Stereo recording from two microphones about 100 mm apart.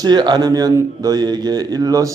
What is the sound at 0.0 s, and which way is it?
Speech, 45° right (ahead or behind).